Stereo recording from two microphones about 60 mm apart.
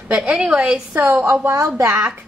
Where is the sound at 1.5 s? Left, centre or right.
Right.